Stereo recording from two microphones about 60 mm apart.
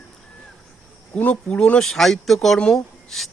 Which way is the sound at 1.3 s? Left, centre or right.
Centre.